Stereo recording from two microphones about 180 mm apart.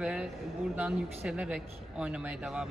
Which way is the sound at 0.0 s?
5° right (ahead or behind).